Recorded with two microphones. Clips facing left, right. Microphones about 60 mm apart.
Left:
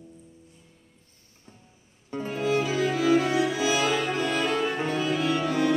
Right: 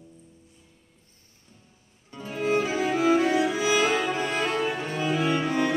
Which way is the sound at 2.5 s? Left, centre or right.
Right.